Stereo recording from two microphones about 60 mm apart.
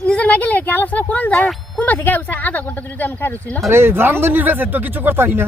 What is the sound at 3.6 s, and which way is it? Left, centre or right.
Speech, right.